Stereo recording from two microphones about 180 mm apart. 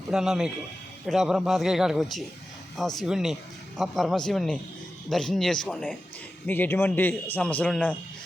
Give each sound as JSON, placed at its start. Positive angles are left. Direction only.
{"t": 0.1, "sound": "a man's voice", "side_deg": 0}